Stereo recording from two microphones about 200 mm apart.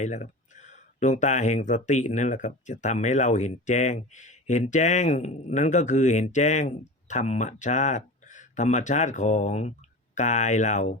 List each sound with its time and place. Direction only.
0.0 s speech: 35° left (ahead or behind)